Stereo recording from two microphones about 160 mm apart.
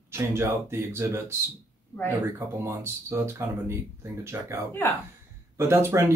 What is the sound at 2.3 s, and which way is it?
Speech, 15° right (ahead or behind).